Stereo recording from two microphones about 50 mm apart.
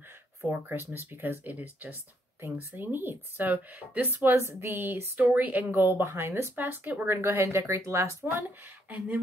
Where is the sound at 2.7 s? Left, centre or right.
Right.